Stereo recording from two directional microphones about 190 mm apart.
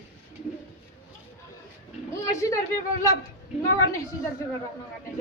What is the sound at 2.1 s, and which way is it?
Speech, 15° left (ahead or behind).